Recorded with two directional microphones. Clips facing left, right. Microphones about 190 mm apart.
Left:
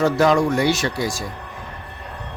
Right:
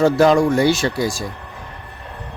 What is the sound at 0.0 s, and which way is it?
A man's voice, 30° right (ahead or behind).